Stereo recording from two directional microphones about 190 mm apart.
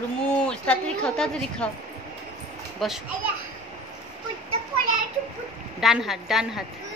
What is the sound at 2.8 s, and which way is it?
Speech, centre (ahead or behind).